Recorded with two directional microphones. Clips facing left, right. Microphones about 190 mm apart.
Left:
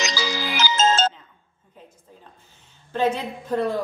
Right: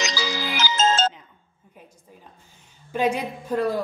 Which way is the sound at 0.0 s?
70° left (ahead or behind).